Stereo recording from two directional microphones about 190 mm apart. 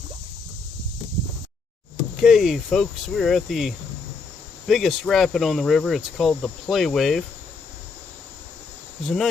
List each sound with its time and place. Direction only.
2.2 s speech: centre (ahead or behind)
9.0 s speech: centre (ahead or behind)